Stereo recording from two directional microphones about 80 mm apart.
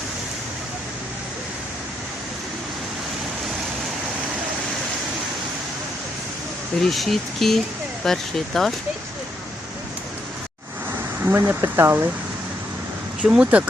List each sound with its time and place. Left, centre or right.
6.8 s speech: centre
11.2 s speech: right
13.2 s speech: centre